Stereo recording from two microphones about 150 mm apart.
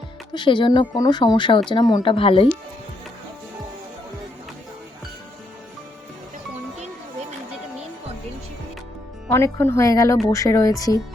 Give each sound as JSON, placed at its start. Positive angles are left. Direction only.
{"t": 0.3, "sound": "speech", "side_deg": 30}
{"t": 9.3, "sound": "speech", "side_deg": 20}